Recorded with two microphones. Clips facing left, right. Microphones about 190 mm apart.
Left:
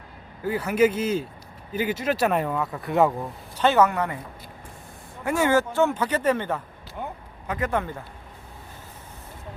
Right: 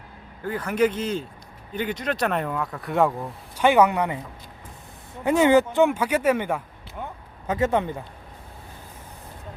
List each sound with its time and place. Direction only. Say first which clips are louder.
0.4 s speech: left 2 dB; 10° left (ahead or behind)
3.6 s speech: right 2 dB; 15° right (ahead or behind)
5.2 s speech: right 4 dB; 20° right (ahead or behind)
7.4 s a man's voice: right 4 dB; 25° right (ahead or behind)